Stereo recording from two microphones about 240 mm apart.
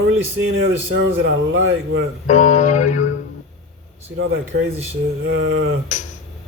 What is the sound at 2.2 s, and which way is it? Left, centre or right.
Mantra, left.